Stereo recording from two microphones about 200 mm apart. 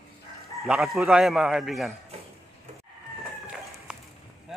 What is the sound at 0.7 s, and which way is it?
Speech, centre (ahead or behind).